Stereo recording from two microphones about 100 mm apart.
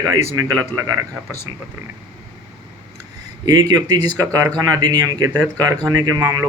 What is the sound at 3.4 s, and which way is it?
Speech, 40° right (ahead or behind).